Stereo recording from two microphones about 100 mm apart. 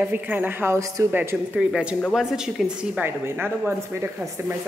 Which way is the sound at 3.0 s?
20° right (ahead or behind).